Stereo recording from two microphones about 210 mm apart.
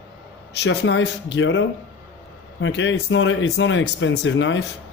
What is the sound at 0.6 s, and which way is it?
Speech, 55° left (ahead or behind).